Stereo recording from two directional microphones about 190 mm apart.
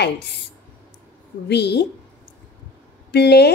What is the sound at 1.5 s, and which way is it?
Speech, 60° left (ahead or behind).